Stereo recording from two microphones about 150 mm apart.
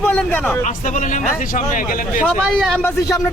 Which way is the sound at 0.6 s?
60° left (ahead or behind).